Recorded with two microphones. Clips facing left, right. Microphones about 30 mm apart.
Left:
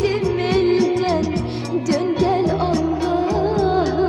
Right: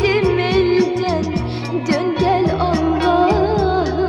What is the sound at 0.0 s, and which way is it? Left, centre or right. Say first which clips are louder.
Music: right 4 dB; right.